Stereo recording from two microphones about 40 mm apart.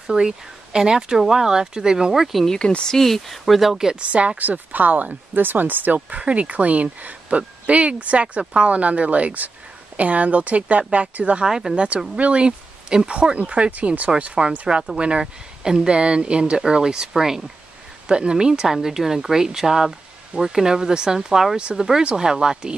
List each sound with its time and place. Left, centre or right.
0.0 s speech: centre
2.4 s speech: centre
3.9 s speech: right
4.4 s speech: right
5.9 s speech: right
11.4 s speech: centre
11.7 s speech: right
13.4 s speech: right
15.6 s speech: centre
16.0 s speech: right
21.5 s speech: right